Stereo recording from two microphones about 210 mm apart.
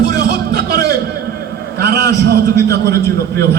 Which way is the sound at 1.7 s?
50° right (ahead or behind).